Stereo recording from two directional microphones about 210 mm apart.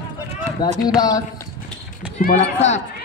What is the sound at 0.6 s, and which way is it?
Speech, 20° left (ahead or behind).